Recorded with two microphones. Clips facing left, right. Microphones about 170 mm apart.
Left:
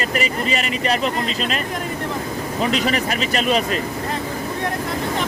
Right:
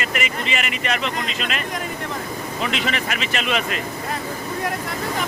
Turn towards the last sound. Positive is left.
turn(degrees=35)  # may be behind; listen again after turning